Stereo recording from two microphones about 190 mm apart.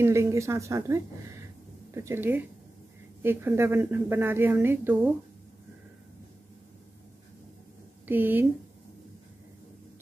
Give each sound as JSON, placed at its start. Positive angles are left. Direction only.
{"t": 0.0, "sound": "a woman's voice", "side_deg": -15}
{"t": 8.1, "sound": "a woman's voice", "side_deg": -10}